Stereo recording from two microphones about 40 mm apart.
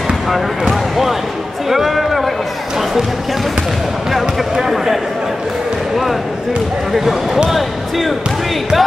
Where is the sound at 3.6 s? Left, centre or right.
Centre.